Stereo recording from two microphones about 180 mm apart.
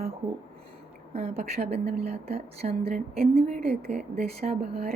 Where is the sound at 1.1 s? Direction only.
35° right (ahead or behind).